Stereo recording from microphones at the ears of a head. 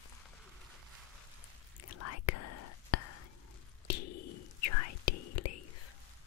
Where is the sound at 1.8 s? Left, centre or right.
Left.